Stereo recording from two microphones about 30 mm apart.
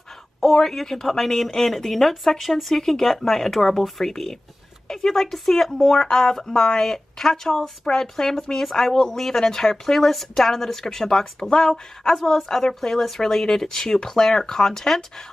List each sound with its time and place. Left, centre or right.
0.4 s speech: centre